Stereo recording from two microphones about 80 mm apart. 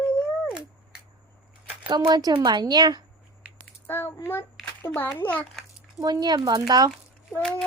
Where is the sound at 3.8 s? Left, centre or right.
Left.